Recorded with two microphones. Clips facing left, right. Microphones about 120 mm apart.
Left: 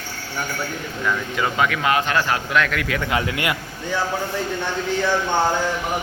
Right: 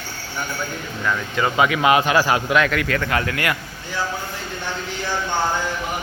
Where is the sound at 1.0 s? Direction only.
Centre (ahead or behind).